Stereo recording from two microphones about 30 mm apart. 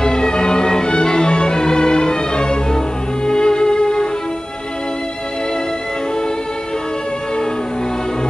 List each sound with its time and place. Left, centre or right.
0.0 s music: left